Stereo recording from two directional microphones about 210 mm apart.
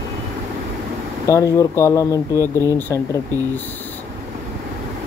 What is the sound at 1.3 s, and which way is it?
Speech, 15° left (ahead or behind).